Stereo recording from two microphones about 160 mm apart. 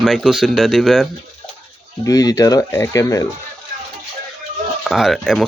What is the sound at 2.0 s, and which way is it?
Speech, 20° left (ahead or behind).